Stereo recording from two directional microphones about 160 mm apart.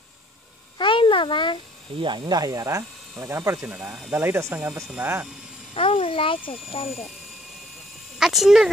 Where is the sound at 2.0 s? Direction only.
30° right (ahead or behind).